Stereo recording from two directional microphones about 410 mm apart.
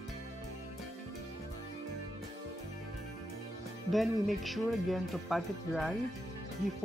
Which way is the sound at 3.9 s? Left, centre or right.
Centre.